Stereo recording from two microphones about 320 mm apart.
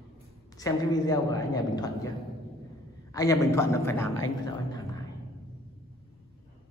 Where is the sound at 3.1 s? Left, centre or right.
Centre.